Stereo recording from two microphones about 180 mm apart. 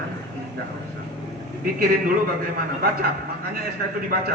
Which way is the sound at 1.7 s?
50° right (ahead or behind).